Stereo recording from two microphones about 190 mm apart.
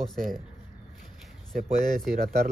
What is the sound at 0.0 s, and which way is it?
Speech, centre (ahead or behind).